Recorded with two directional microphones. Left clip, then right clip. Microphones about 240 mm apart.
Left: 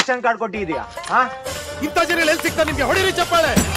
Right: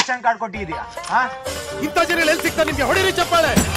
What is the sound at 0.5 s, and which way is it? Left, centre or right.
Speech, centre.